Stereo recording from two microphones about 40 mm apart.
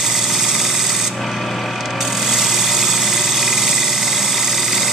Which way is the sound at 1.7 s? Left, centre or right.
Centre.